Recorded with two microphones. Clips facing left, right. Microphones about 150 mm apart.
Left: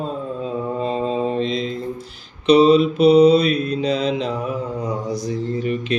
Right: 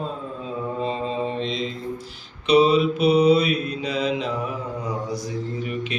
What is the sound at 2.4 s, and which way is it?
Mantra, 35° left (ahead or behind).